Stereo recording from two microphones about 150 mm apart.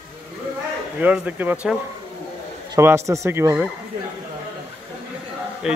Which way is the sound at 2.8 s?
15° right (ahead or behind).